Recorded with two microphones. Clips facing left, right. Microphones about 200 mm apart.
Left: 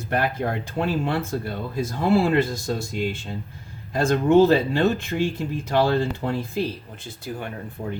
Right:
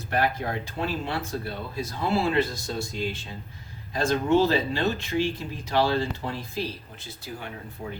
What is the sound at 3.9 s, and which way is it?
Speech, 50° left (ahead or behind).